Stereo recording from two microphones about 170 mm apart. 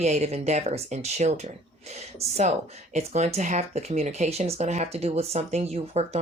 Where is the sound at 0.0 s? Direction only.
40° right (ahead or behind).